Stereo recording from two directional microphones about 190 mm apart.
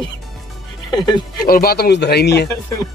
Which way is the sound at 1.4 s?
50° left (ahead or behind).